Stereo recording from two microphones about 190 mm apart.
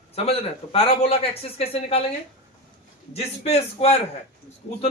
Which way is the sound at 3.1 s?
35° left (ahead or behind).